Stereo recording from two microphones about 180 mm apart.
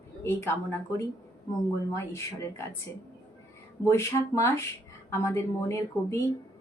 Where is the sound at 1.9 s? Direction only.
15° left (ahead or behind).